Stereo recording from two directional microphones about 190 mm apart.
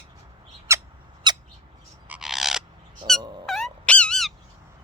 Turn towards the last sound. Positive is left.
turn(degrees=5)  # may be behind; listen again after turning